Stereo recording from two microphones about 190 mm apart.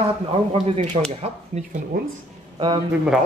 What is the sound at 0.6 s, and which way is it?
Speech, 35° right (ahead or behind).